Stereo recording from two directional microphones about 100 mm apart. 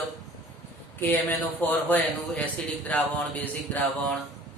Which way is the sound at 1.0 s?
20° left (ahead or behind).